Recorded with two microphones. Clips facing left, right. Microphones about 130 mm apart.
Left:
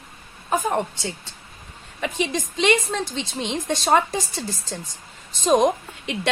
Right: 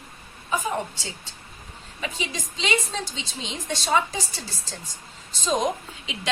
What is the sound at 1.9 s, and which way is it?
A woman's voice, 55° left (ahead or behind).